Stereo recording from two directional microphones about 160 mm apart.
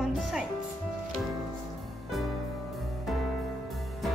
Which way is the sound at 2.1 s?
Centre (ahead or behind).